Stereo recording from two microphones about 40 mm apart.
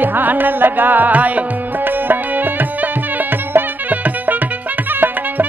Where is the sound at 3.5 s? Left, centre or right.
Right.